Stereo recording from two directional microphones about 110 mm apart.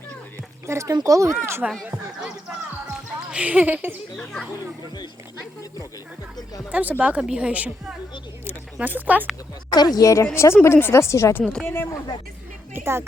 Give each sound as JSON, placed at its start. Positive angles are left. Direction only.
{"t": 0.7, "sound": "speech", "side_deg": -30}
{"t": 1.6, "sound": "speech", "side_deg": -10}
{"t": 3.3, "sound": "speech", "side_deg": -10}
{"t": 4.2, "sound": "speech", "side_deg": 5}
{"t": 6.7, "sound": "speech", "side_deg": -15}
{"t": 9.6, "sound": "speech", "side_deg": 40}
{"t": 12.7, "sound": "speech", "side_deg": -20}